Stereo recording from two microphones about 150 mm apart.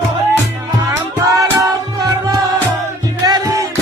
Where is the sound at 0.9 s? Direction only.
25° right (ahead or behind).